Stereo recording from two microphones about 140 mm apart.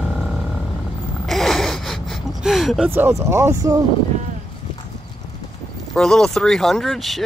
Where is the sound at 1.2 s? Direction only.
Centre (ahead or behind).